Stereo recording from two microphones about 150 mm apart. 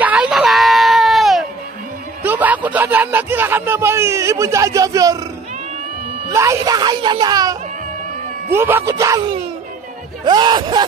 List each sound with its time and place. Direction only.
0.0 s a sound: 10° right (ahead or behind)
2.2 s speech: 10° right (ahead or behind)
6.3 s speech: 20° right (ahead or behind)
8.5 s speech: 15° right (ahead or behind)
10.2 s speech: 30° right (ahead or behind)